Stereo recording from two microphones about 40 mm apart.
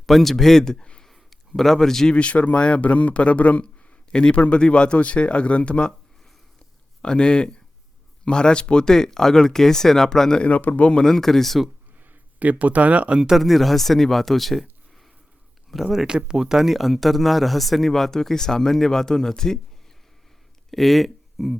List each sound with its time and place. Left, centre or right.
0.0 s speech: centre
1.0 s a sound: centre
2.1 s a man's voice: left
4.1 s speech: left
7.0 s speech: left
10.4 s a man's voice: left
11.0 s speech: centre
12.4 s speech: right
13.3 s speech: centre
15.7 s speech: centre
16.0 s speech: right; by 19.5 s centre
20.7 s speech: centre